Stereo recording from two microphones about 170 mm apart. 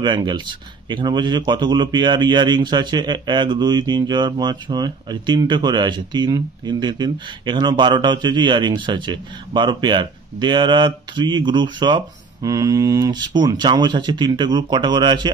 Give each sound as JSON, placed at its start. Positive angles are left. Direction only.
{"t": 0.0, "sound": "a man's voice", "side_deg": -25}